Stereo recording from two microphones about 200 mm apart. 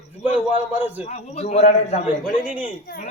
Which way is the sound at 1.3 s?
35° left (ahead or behind).